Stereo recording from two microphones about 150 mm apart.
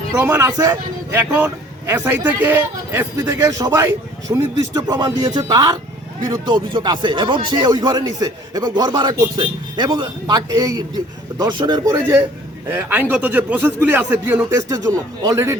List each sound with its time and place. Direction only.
0.1 s speech: 15° right (ahead or behind)
1.1 s speech: 10° right (ahead or behind); by 11.9 s 30° right (ahead or behind)
12.7 s speech: 10° right (ahead or behind)
14.5 s speech: 25° right (ahead or behind)